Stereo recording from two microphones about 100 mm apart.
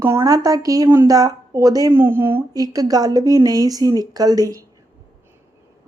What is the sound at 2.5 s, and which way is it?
A woman's voice, 40° right (ahead or behind).